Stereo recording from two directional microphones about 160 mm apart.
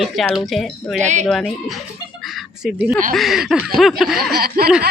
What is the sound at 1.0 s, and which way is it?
Speech, 45° right (ahead or behind).